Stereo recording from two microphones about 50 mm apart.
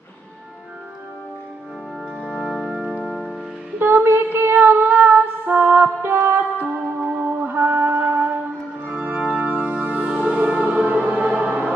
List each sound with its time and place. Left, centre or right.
2.1 s music: centre
3.8 s female singing: right
7.0 s music: right
7.3 s music: right
8.8 s organ: right
9.4 s music: right